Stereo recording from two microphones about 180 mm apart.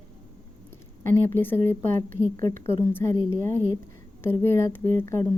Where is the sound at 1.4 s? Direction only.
10° left (ahead or behind).